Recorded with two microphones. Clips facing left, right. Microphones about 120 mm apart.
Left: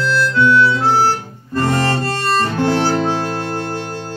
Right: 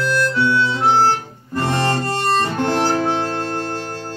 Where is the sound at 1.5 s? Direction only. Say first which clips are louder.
Left 2 dB; 15° right (ahead or behind).